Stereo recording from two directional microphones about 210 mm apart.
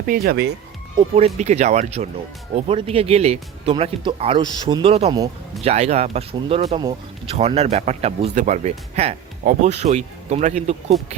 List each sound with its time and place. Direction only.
0.0 s speech: 45° right (ahead or behind)
1.4 s speech: 35° right (ahead or behind)